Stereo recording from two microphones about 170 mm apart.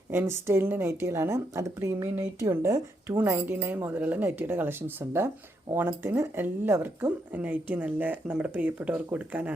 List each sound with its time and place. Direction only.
0.1 s a woman's voice: 15° right (ahead or behind)